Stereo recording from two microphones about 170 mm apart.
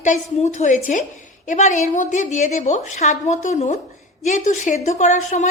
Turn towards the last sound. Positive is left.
turn(degrees=45)  # may be behind; listen again after turning